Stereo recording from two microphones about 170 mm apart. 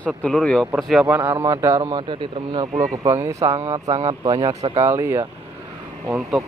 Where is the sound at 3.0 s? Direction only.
20° right (ahead or behind).